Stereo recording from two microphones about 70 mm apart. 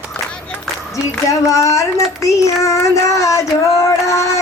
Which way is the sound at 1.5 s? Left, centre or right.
Left.